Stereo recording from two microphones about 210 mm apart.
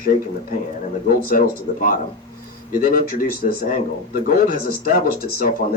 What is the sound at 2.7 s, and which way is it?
Speech, 45° left (ahead or behind).